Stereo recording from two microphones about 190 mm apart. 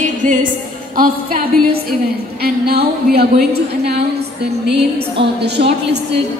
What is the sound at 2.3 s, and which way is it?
A woman's voice, 55° right (ahead or behind).